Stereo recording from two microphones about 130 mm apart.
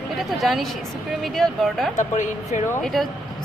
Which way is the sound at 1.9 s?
70° left (ahead or behind).